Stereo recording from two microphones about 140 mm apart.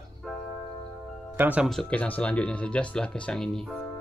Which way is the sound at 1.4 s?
10° right (ahead or behind).